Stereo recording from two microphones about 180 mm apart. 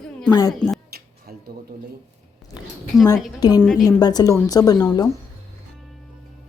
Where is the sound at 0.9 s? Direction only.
60° right (ahead or behind).